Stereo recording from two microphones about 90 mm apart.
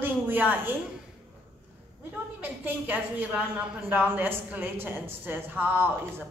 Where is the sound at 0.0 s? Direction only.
20° right (ahead or behind).